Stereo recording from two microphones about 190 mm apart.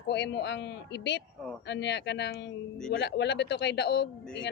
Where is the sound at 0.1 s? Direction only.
65° left (ahead or behind).